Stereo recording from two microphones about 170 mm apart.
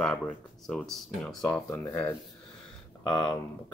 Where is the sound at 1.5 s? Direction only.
15° left (ahead or behind).